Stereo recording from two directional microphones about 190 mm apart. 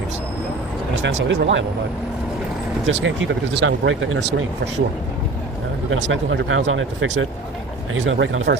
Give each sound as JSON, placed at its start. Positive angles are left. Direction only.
{"t": 1.0, "sound": "speech", "side_deg": -75}
{"t": 2.8, "sound": "speech", "side_deg": -85}
{"t": 5.9, "sound": "speech", "side_deg": -75}
{"t": 6.7, "sound": "speech", "side_deg": -90}